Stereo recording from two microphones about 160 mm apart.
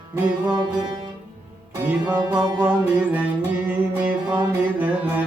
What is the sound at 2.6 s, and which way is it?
Music, 10° right (ahead or behind).